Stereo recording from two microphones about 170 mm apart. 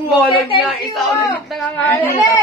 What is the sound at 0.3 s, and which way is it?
Speech, 30° left (ahead or behind).